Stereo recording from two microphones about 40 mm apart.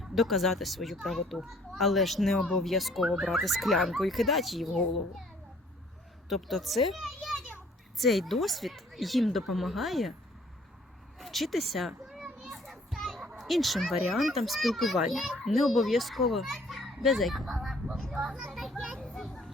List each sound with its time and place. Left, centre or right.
0.0 s speech: centre
6.2 s speech: centre
11.2 s children playing: centre
13.4 s speech: centre
18.2 s a child's voice: centre
18.5 s children playing: centre